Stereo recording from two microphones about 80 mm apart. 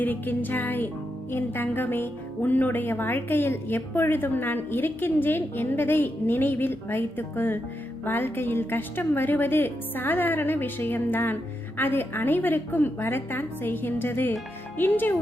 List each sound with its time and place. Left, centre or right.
0.0 s speech: left